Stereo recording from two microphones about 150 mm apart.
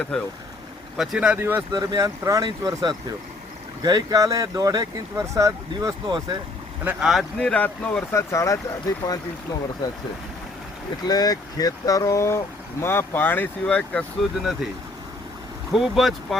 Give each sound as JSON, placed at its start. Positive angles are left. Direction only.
{"t": 0.9, "sound": "speech", "side_deg": 0}
{"t": 1.7, "sound": "speech", "side_deg": -25}
{"t": 6.8, "sound": "speech", "side_deg": 0}
{"t": 11.0, "sound": "speech", "side_deg": 25}
{"t": 15.7, "sound": "speech", "side_deg": 0}